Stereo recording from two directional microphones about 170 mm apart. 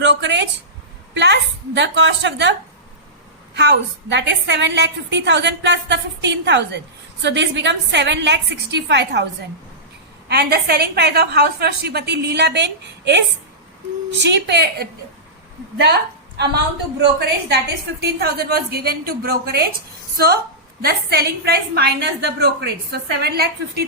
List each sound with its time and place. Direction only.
0.0 s a woman's voice: 90° right
10.2 s a woman's voice: 70° right (ahead or behind)
17.0 s a woman's voice: 80° right